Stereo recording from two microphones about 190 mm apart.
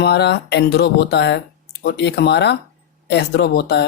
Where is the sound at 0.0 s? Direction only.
60° left (ahead or behind).